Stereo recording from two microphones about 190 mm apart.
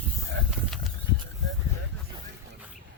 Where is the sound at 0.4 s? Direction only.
75° right (ahead or behind).